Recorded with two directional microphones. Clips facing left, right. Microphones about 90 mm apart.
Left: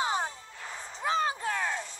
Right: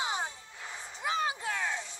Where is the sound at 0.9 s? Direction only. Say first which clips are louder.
Left 4 dB; 35° left (ahead or behind).